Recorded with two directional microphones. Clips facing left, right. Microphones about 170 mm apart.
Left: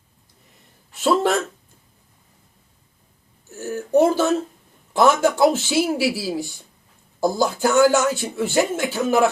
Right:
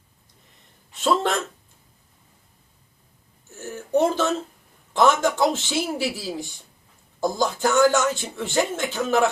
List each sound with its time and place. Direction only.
1.0 s speech: 5° left (ahead or behind)
3.6 s a sound: 10° left (ahead or behind)
4.9 s speech: 10° left (ahead or behind)